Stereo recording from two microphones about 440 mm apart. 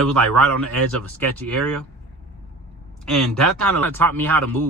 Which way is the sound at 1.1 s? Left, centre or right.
Centre.